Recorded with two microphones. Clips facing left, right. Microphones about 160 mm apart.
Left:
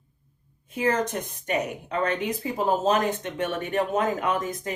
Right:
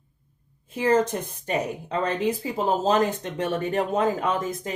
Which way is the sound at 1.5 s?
30° right (ahead or behind).